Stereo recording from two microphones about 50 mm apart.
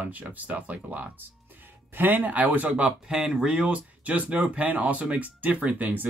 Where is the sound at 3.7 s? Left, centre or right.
Right.